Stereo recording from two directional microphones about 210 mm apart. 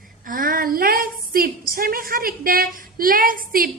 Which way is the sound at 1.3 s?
45° right (ahead or behind).